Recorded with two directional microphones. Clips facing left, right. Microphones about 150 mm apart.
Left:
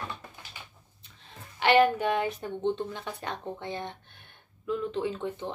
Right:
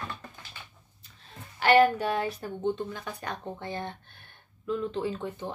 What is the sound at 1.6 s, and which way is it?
Speech, 20° left (ahead or behind).